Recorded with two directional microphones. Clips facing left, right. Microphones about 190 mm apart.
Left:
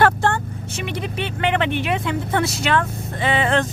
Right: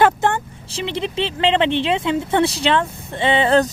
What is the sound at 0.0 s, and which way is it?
Vehicle, 20° right (ahead or behind).